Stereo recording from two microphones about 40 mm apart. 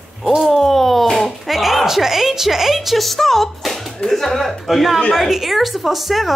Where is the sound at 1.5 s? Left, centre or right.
Centre.